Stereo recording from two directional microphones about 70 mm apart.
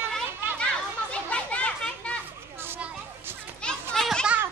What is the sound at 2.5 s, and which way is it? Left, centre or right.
Children playing, right.